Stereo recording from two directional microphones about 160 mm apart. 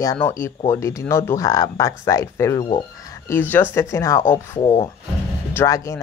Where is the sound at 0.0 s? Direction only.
20° left (ahead or behind).